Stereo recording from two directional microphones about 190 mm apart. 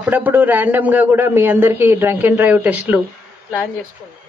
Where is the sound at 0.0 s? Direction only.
10° right (ahead or behind).